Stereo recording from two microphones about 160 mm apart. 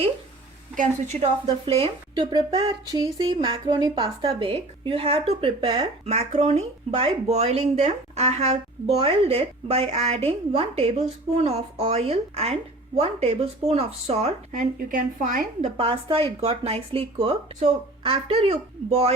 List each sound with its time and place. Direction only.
0.8 s a woman's voice: 45° right (ahead or behind)
1.6 s speech: 35° right (ahead or behind)
6.1 s speech: 45° right (ahead or behind)
14.5 s a woman's voice: 60° right (ahead or behind)
15.8 s speech: 35° right (ahead or behind)